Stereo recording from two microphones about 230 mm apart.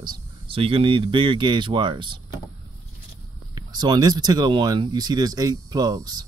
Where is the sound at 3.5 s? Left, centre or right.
Centre.